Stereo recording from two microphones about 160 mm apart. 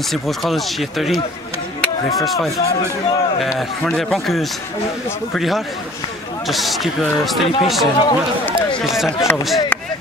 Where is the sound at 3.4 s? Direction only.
Centre (ahead or behind).